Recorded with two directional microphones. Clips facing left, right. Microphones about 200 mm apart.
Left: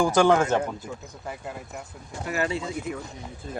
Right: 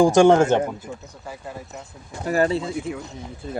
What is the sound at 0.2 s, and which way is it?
Speech, 25° right (ahead or behind).